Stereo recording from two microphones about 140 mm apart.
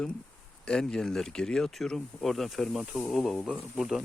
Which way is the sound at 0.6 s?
5° left (ahead or behind).